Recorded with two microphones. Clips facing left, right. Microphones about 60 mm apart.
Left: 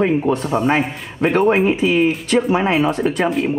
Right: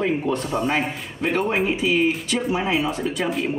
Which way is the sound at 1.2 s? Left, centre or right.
Left.